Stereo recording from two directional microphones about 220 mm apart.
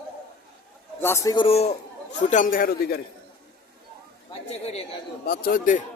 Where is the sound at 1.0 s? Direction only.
10° left (ahead or behind); by 3.0 s 40° left (ahead or behind).